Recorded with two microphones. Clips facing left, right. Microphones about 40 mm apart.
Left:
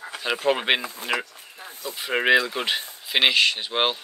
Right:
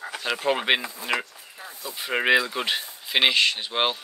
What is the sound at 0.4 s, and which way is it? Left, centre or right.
Speech, centre.